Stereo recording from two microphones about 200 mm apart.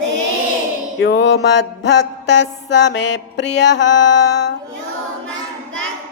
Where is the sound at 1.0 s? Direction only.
60° left (ahead or behind).